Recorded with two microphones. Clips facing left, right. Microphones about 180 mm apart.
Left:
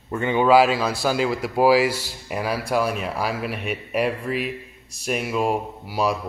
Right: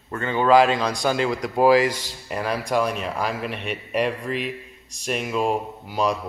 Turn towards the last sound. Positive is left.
turn(degrees=10)  # may be behind; listen again after turning